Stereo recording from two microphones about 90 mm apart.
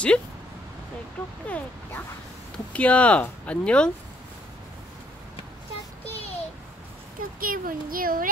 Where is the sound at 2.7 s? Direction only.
15° left (ahead or behind).